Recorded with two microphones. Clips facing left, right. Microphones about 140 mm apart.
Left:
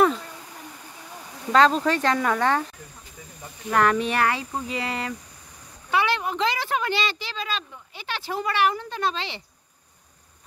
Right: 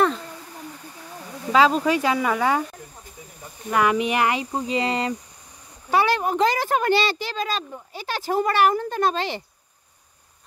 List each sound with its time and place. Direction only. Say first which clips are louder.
1.5 s speech: right 1 dB; 5° right (ahead or behind)
3.7 s speech: right 1 dB; 10° right (ahead or behind)
5.9 s speech: right 4 dB; 40° right (ahead or behind)